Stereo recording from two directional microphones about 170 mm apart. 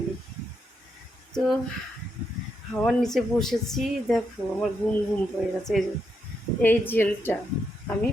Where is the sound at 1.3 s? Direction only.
5° left (ahead or behind).